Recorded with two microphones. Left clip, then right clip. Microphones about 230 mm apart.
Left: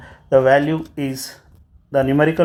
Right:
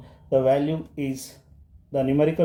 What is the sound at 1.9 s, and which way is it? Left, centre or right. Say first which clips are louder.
Speech: left 6 dB; left.